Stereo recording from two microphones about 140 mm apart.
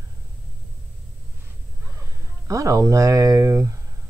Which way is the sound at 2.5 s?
25° right (ahead or behind).